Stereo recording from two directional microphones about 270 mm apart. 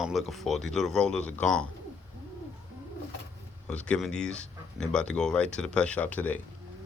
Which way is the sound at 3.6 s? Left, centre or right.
Centre.